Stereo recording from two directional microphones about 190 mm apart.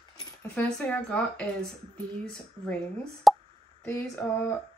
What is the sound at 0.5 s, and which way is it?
Speech, 5° left (ahead or behind).